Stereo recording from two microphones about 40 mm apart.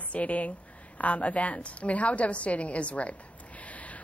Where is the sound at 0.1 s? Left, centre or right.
Left.